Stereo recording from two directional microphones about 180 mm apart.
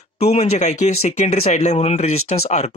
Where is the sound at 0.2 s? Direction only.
35° left (ahead or behind).